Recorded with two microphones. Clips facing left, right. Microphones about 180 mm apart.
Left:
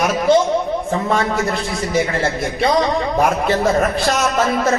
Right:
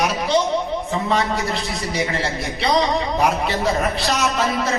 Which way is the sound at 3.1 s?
50° left (ahead or behind).